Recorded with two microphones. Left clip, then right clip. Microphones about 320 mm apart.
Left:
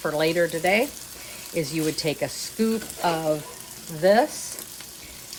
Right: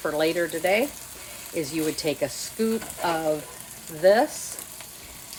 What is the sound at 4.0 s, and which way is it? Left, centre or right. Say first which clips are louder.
Speech: even; centre.